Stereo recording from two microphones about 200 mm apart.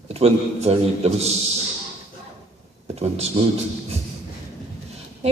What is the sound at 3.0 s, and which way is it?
Speech, 30° right (ahead or behind).